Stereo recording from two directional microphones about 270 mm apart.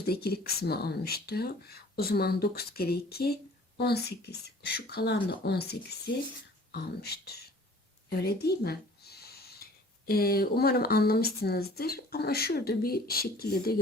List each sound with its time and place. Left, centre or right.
0.0 s speech: left
8.1 s a sound: left
10.1 s speech: left